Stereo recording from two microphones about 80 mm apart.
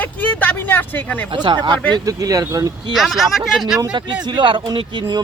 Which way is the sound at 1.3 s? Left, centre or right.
Right.